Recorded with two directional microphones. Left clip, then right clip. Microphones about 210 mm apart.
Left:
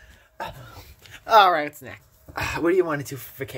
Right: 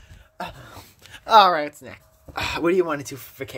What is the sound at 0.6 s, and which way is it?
Dog, 40° right (ahead or behind).